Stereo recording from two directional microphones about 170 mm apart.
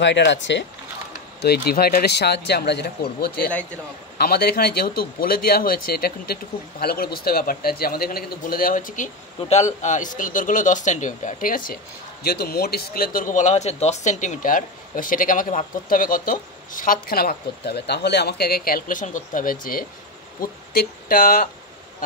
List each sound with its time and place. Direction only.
0.0 s speech: 90° left
1.4 s speech: 70° left (ahead or behind)